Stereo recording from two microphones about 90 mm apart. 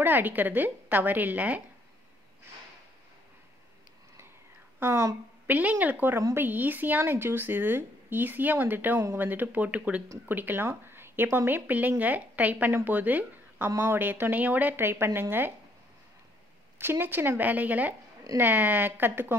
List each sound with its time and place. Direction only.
0.0 s speech: 20° right (ahead or behind)
4.7 s speech: 30° right (ahead or behind)
5.5 s speech: 15° right (ahead or behind)
16.7 s speech: 25° right (ahead or behind)